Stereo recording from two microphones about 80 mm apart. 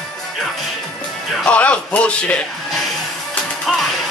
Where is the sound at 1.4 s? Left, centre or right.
Centre.